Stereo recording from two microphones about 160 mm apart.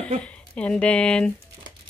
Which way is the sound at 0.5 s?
5° left (ahead or behind).